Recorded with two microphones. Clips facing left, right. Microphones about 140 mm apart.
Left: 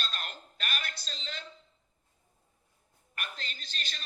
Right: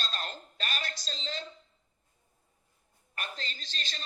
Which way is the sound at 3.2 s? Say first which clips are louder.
Right 2 dB; 35° right (ahead or behind).